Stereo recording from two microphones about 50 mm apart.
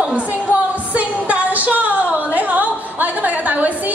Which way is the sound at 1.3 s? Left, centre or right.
Right.